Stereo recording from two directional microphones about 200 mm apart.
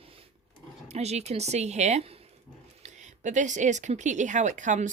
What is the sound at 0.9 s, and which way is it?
Speech, 35° right (ahead or behind).